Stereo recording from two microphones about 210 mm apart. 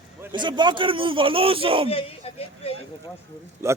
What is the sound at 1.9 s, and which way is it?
Speech, 25° left (ahead or behind).